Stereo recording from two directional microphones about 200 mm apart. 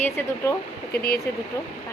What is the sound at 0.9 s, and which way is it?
Speech, 50° left (ahead or behind).